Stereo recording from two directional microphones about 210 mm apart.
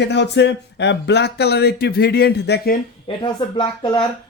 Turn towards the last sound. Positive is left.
turn(degrees=20)  # may be behind; listen again after turning